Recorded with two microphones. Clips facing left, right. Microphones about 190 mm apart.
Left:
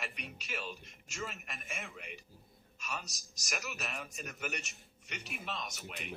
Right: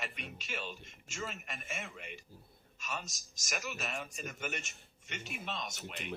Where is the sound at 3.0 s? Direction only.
40° left (ahead or behind).